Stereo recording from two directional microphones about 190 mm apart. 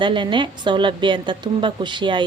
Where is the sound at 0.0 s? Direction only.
25° right (ahead or behind).